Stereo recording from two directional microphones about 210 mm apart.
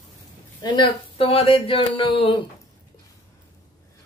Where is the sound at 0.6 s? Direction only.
20° left (ahead or behind).